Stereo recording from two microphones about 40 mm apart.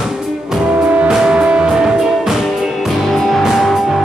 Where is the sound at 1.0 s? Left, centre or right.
Centre.